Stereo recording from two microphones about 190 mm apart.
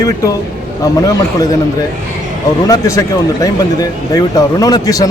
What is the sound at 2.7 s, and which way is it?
Speech, 15° left (ahead or behind).